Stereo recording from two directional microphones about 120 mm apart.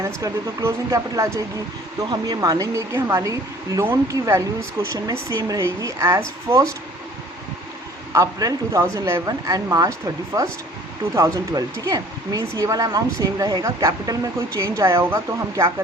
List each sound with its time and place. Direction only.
0.0 s speech: 25° right (ahead or behind)
8.1 s speech: 30° right (ahead or behind)